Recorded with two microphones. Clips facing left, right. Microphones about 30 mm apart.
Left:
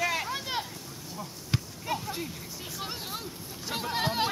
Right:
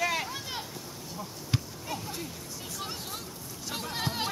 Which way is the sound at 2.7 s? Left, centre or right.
Centre.